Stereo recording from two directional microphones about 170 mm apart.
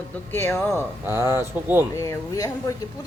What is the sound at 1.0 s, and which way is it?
Speech, 15° right (ahead or behind).